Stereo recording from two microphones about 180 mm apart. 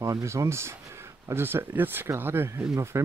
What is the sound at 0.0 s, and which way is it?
Speech, 15° right (ahead or behind).